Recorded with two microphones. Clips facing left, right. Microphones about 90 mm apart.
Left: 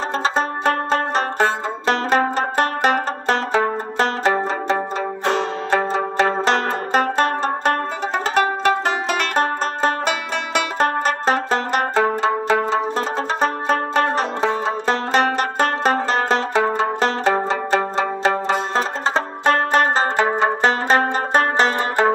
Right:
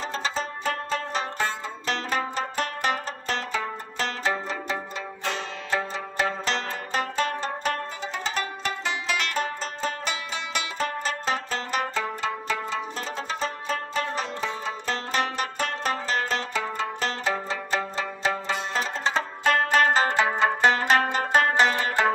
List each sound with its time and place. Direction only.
0.2 s music: 55° left (ahead or behind)
12.2 s zither: 60° left (ahead or behind); by 20.3 s 35° left (ahead or behind)
20.3 s music: 25° left (ahead or behind)
21.5 s music: 45° left (ahead or behind)